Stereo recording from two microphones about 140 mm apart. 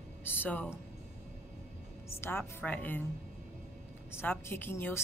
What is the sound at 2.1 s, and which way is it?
Speech, 15° left (ahead or behind).